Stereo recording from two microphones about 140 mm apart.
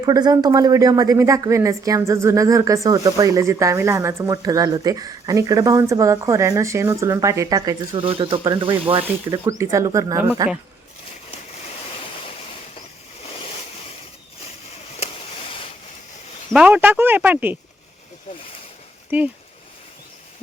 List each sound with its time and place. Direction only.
0.0 s a woman's voice: 30° right (ahead or behind)
8.0 s speech: 40° right (ahead or behind)
9.3 s a woman's voice: 25° right (ahead or behind)
16.5 s speech: 10° right (ahead or behind)
19.1 s speech: 15° right (ahead or behind)